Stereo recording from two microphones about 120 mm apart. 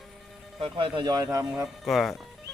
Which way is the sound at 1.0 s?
30° right (ahead or behind).